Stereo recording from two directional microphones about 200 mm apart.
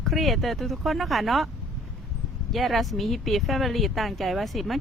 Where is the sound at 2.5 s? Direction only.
Centre (ahead or behind).